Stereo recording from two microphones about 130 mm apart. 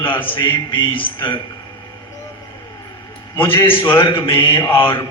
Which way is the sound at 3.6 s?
40° left (ahead or behind).